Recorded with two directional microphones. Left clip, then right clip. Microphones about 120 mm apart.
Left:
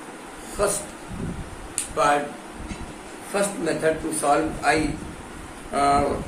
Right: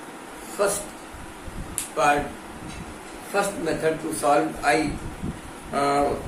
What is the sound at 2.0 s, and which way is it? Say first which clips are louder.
Speech: even; 20° left (ahead or behind).